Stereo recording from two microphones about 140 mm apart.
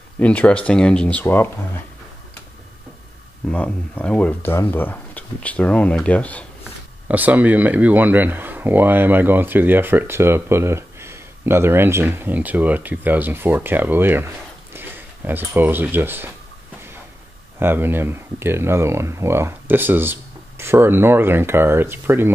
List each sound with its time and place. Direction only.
0.2 s speech: 10° left (ahead or behind)
3.4 s speech: 10° left (ahead or behind)
7.1 s speech: 10° right (ahead or behind)
17.6 s speech: 15° right (ahead or behind)